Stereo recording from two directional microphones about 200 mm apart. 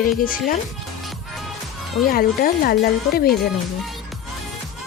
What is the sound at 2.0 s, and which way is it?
Speech, 45° left (ahead or behind).